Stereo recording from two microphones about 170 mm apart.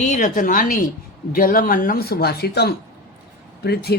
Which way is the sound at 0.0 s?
50° left (ahead or behind).